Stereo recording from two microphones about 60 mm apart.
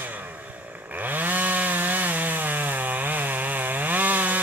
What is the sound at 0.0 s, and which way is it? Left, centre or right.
Chainsaw, right.